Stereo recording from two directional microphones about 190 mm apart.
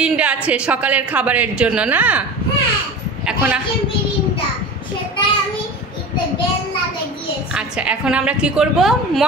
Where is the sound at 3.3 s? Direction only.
5° right (ahead or behind).